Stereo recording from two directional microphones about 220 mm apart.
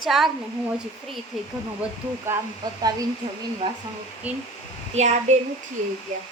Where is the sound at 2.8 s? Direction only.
20° right (ahead or behind).